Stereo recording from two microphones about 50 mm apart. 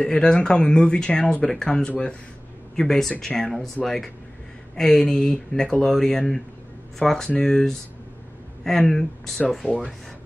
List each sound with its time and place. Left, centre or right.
0.0 s speech: centre
1.9 s speech: left
2.7 s speech: centre